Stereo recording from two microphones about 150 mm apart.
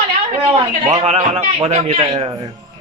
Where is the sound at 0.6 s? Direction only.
35° right (ahead or behind).